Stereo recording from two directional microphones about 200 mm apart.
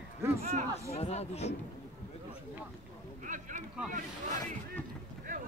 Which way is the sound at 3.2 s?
40° right (ahead or behind).